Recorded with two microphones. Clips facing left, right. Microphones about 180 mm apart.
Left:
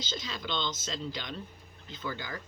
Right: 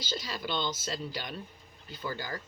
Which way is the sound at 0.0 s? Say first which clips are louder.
Right 2 dB; 10° right (ahead or behind).